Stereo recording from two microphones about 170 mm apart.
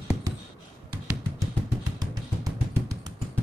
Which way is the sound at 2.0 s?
20° right (ahead or behind).